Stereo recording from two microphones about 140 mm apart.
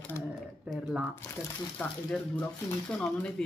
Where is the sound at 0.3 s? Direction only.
Centre (ahead or behind).